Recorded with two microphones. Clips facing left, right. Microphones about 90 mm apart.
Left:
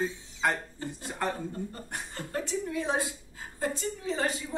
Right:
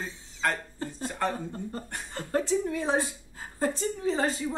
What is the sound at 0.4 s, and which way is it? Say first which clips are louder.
Speech: even; 15° left (ahead or behind).